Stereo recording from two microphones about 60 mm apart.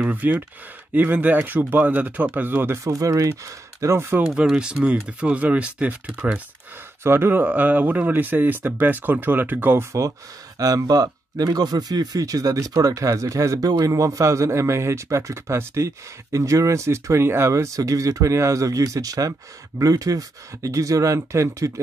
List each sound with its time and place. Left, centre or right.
0.0 s speech: right
2.8 s speech: right
4.3 s speech: centre
7.0 s speech: right
10.6 s speech: right